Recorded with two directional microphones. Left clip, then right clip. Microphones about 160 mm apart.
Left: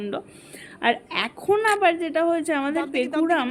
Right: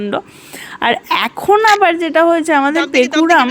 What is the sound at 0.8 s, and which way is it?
Speech, 55° right (ahead or behind).